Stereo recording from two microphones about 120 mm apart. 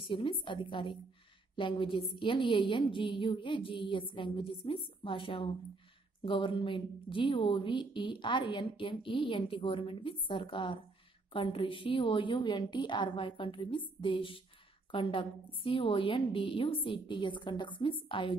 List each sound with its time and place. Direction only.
0.0 s a woman's voice: 45° left (ahead or behind)